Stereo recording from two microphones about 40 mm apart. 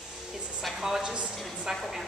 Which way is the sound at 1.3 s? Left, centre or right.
Centre.